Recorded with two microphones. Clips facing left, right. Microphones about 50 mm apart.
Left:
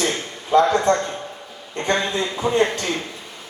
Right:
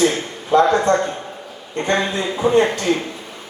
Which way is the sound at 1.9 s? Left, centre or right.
Centre.